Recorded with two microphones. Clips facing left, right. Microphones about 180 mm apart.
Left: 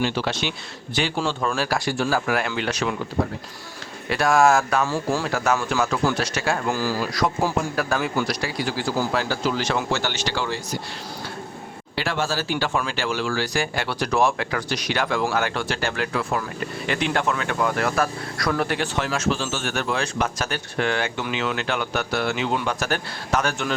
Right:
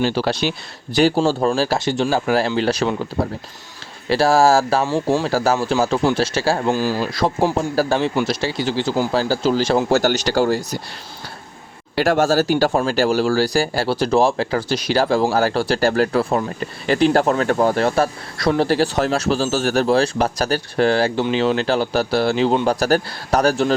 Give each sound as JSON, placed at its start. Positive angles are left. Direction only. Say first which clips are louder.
{"t": 0.0, "sound": "a man's voice", "louder": "right 5 dB", "side_deg": -35}
{"t": 4.9, "sound": "a man's voice", "louder": "right 5 dB", "side_deg": -20}
{"t": 5.3, "sound": "a man's voice", "louder": "right 5 dB", "side_deg": -30}
{"t": 6.7, "sound": "a man's voice", "louder": "right 4 dB", "side_deg": -20}
{"t": 11.9, "sound": "speech", "louder": "right 10 dB", "side_deg": -45}